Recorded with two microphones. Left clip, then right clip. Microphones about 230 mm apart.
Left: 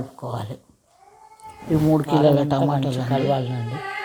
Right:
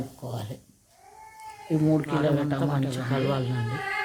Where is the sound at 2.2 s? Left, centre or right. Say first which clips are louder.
Left 8 dB; centre.